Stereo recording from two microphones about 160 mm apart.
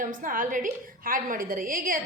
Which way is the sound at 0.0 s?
55° right (ahead or behind).